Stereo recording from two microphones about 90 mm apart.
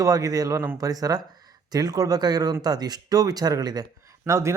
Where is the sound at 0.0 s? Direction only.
40° right (ahead or behind).